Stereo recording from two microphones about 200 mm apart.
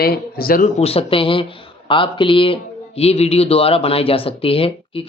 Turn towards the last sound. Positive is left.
turn(degrees=30)  # may be behind; listen again after turning